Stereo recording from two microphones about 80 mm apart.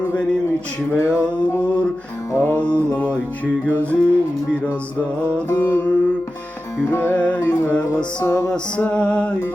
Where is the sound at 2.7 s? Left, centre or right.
Right.